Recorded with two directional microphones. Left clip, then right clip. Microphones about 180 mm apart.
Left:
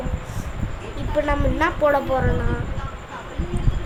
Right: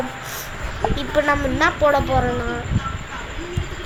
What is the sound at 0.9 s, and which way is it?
A woman's voice, 10° left (ahead or behind).